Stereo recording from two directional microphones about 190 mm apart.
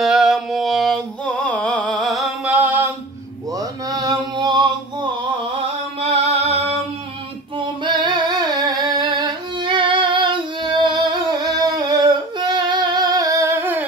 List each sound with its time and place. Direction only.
0.0 s a sound: centre (ahead or behind); by 4.6 s 20° right (ahead or behind)
5.9 s music: 35° right (ahead or behind)
7.5 s singing: 25° right (ahead or behind)